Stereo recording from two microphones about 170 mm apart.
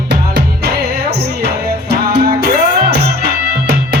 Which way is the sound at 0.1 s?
75° right (ahead or behind).